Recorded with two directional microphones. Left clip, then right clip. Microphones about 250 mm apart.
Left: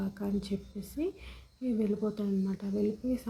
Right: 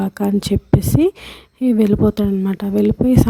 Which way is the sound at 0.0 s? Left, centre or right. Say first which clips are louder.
Right 17 dB; right.